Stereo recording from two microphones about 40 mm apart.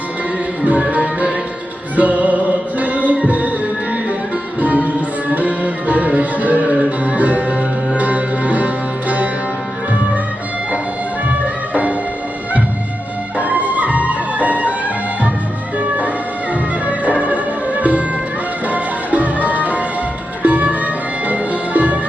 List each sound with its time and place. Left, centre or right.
0.6 s music: right
4.6 s music: right
13.4 s music: right
15.8 s music: right